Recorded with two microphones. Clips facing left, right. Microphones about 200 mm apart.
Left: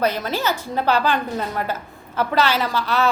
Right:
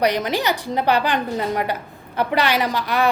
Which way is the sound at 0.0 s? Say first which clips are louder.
Right 2 dB; 15° right (ahead or behind).